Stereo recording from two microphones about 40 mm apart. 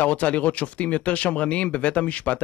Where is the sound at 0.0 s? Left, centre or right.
Left.